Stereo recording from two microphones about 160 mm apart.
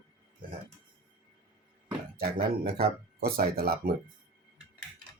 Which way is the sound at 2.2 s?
65° right (ahead or behind).